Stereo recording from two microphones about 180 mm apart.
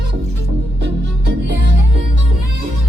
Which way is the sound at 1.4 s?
75° right (ahead or behind).